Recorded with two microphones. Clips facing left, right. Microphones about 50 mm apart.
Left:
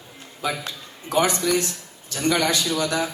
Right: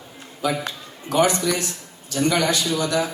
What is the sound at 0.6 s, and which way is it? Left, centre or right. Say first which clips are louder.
Speech: right 2 dB; right.